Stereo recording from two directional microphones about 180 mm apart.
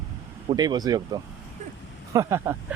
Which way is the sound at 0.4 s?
25° right (ahead or behind).